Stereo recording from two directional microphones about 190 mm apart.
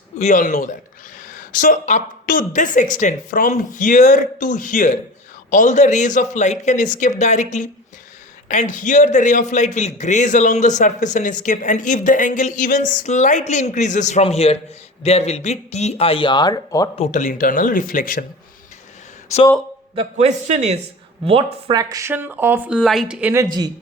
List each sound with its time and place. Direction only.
0.2 s a man's voice: 40° left (ahead or behind); by 16.9 s 20° left (ahead or behind)
16.9 s speech: 35° left (ahead or behind)
20.0 s a man's voice: 35° right (ahead or behind)
21.8 s speech: 20° right (ahead or behind)